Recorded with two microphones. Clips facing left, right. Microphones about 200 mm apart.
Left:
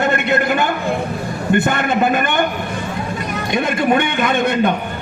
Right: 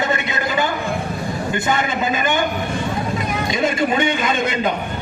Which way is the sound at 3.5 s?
60° left (ahead or behind).